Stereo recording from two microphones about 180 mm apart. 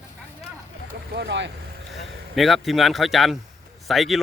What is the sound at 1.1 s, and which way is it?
Speech, 70° right (ahead or behind).